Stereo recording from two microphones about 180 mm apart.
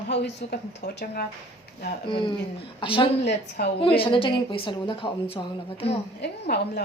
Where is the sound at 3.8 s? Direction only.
30° left (ahead or behind).